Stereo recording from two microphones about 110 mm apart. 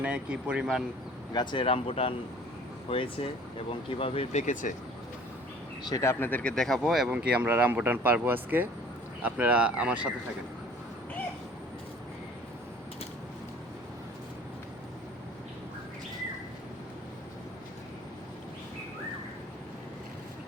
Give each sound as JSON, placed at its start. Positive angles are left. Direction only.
{"t": 0.0, "sound": "speech", "side_deg": -10}
{"t": 1.3, "sound": "speech", "side_deg": 40}
{"t": 1.6, "sound": "speech", "side_deg": 60}
{"t": 5.9, "sound": "speech", "side_deg": 25}
{"t": 6.6, "sound": "speech", "side_deg": 0}
{"t": 7.1, "sound": "speech", "side_deg": -10}